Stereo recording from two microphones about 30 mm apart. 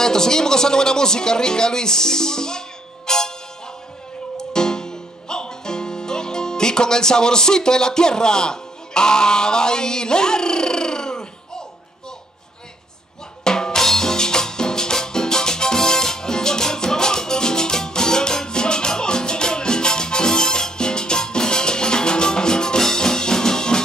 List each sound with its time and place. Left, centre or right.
0.0 s speech: centre
3.1 s music: centre
4.4 s music: left
13.4 s drum: left